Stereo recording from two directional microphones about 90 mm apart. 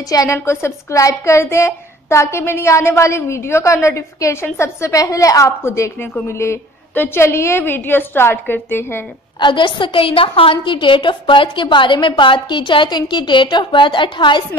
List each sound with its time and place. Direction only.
0.1 s a woman's voice: 40° left (ahead or behind)
9.4 s a woman's voice: 60° left (ahead or behind)